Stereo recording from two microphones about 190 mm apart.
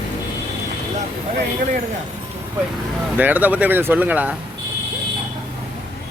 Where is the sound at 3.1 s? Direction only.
10° right (ahead or behind).